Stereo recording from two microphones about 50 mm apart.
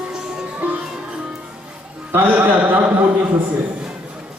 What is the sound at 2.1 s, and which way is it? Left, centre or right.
Speech, right.